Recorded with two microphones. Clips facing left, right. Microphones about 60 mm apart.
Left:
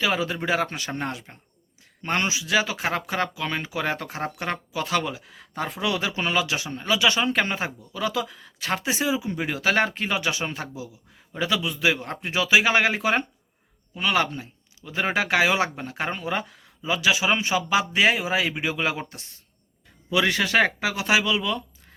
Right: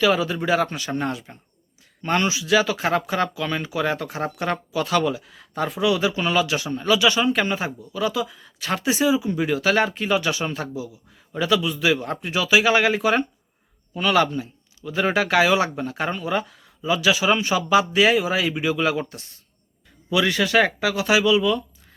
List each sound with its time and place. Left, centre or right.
0.0 s speech: left
8.5 s speech: left
20.1 s speech: left